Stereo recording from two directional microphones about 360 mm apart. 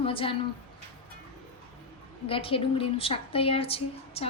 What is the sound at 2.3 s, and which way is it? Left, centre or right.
A woman's voice, centre.